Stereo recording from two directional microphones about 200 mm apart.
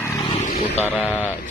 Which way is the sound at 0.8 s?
10° left (ahead or behind).